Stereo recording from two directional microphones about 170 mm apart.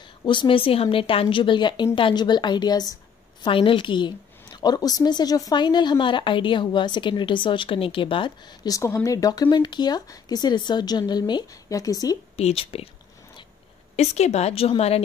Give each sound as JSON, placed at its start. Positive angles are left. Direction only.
{"t": 0.2, "sound": "a woman's voice", "side_deg": 30}
{"t": 12.4, "sound": "a woman's voice", "side_deg": 35}
{"t": 13.9, "sound": "a woman's voice", "side_deg": 40}